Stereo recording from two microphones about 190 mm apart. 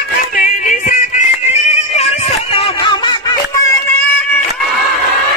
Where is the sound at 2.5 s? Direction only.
25° left (ahead or behind).